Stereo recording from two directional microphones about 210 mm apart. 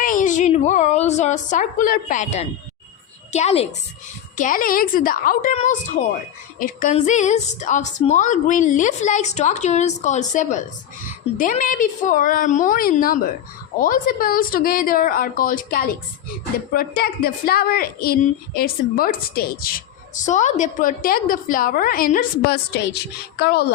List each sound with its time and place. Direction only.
0.0 s a woman's voice: 40° left (ahead or behind)
4.4 s a woman's voice: 40° left (ahead or behind)